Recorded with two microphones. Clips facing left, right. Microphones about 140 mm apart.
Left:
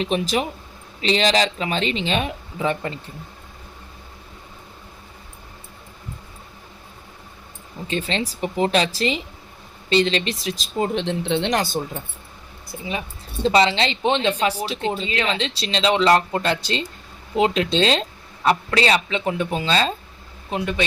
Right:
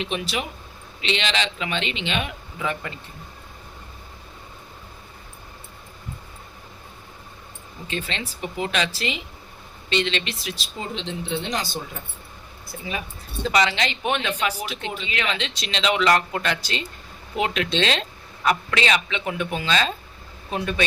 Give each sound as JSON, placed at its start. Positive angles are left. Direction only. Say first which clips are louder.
{"t": 0.0, "sound": "speech", "louder": "left 6 dB", "side_deg": 40}
{"t": 7.9, "sound": "speech", "louder": "left 6 dB", "side_deg": 35}
{"t": 10.8, "sound": "speech", "louder": "left 9 dB", "side_deg": 60}
{"t": 11.5, "sound": "speech", "louder": "left 6 dB", "side_deg": 55}
{"t": 12.7, "sound": "speech", "louder": "left 2 dB", "side_deg": 15}
{"t": 13.4, "sound": "speech", "louder": "left 4 dB", "side_deg": 30}
{"t": 20.5, "sound": "speech", "louder": "left 2 dB", "side_deg": 20}